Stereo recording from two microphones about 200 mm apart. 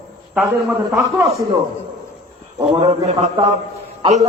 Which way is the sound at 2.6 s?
25° right (ahead or behind).